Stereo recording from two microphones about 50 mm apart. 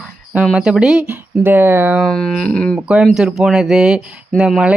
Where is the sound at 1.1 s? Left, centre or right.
Right.